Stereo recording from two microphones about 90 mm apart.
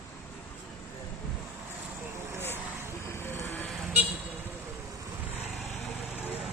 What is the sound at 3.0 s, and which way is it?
Vehicle, 25° left (ahead or behind).